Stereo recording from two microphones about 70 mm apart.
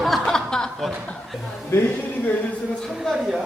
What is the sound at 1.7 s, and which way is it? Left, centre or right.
Speech, left.